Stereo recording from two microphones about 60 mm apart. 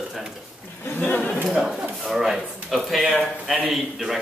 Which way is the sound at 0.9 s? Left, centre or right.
Left.